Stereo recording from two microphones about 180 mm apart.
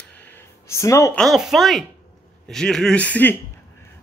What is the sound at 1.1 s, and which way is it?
Speech, centre (ahead or behind).